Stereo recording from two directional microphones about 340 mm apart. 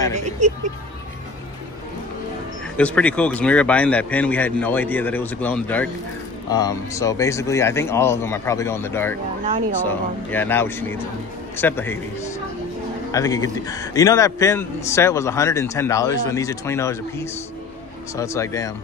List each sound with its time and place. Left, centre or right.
0.1 s vehicle: right
2.8 s a man's voice: centre